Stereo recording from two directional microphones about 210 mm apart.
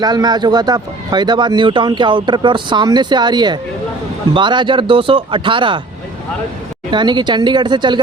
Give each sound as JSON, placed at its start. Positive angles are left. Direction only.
{"t": 0.0, "sound": "speech", "side_deg": -20}
{"t": 6.9, "sound": "speech", "side_deg": -20}